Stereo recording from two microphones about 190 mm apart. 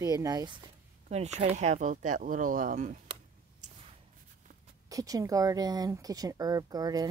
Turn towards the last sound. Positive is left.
turn(degrees=-20)  # may be behind; listen again after turning